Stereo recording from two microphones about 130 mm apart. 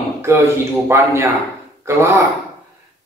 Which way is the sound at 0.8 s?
20° right (ahead or behind).